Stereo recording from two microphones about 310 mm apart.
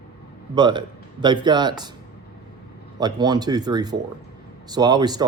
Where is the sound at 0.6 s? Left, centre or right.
Centre.